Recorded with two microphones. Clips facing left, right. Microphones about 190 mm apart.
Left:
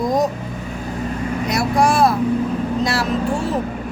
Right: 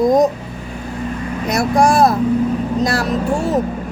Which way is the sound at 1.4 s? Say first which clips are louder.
Right 4 dB; 45° right (ahead or behind).